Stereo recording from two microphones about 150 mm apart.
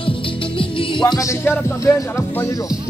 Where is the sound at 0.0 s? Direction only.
35° left (ahead or behind); by 2.6 s 20° left (ahead or behind).